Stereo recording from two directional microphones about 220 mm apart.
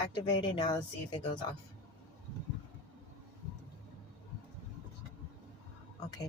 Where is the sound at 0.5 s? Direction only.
20° left (ahead or behind).